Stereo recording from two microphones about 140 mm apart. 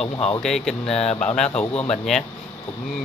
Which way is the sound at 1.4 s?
45° left (ahead or behind).